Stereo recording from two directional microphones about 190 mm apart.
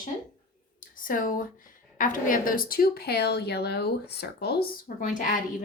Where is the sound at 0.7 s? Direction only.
45° left (ahead or behind).